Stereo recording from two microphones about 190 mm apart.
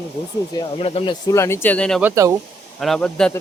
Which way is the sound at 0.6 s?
30° left (ahead or behind).